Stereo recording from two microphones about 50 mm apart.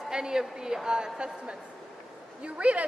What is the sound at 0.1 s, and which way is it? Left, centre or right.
A woman's voice, centre.